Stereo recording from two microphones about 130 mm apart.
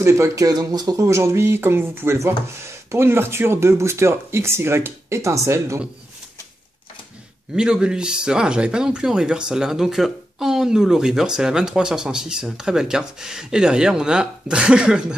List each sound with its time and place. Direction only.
0.0 s speech: 25° right (ahead or behind)
7.5 s speech: 5° right (ahead or behind)